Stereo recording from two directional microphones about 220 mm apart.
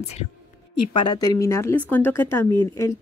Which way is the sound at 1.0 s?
15° left (ahead or behind).